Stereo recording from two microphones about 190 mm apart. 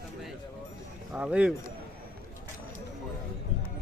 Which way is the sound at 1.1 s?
5° right (ahead or behind).